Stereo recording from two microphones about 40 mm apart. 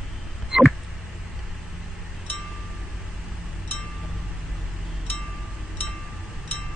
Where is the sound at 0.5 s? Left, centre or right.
Centre.